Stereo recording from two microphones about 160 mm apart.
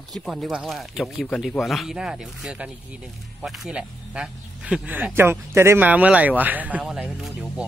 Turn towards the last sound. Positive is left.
turn(degrees=0)  # may be behind; listen again after turning